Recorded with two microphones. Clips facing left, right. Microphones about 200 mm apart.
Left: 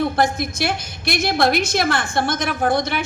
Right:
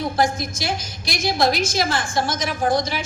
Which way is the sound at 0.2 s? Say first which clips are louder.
Left 2 dB; 60° left (ahead or behind).